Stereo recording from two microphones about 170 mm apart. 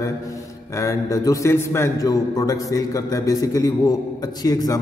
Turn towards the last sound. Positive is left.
turn(degrees=20)  # may be behind; listen again after turning